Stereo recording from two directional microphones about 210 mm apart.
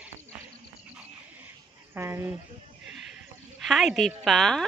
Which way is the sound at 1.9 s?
10° right (ahead or behind).